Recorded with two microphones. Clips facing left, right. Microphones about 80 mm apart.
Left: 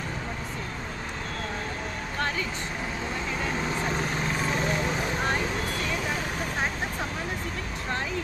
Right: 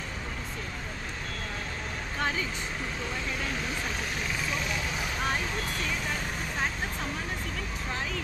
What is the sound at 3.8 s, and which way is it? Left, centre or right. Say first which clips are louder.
Vehicle: left 5 dB; left.